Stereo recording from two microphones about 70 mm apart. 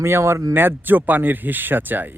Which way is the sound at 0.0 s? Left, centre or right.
Right.